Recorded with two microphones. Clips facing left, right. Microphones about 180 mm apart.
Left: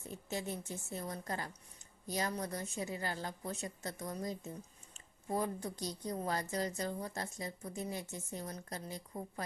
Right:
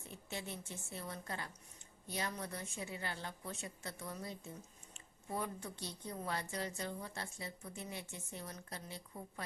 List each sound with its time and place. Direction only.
0.1 s speech: 40° left (ahead or behind)